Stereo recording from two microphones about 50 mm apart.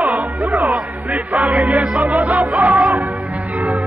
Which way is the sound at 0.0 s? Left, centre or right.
Right.